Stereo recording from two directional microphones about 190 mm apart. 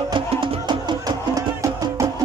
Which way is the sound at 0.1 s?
25° right (ahead or behind).